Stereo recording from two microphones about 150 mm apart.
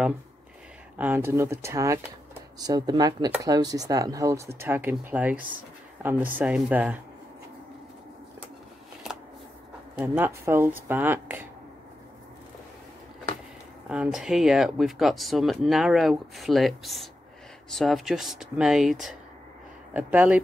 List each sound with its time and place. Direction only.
0.9 s speech: 10° right (ahead or behind)
9.9 s speech: 15° right (ahead or behind)
13.8 s speech: 5° right (ahead or behind)